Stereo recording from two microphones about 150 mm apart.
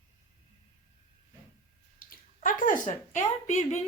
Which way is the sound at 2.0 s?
65° left (ahead or behind).